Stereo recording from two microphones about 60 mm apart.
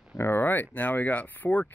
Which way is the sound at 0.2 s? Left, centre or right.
Left.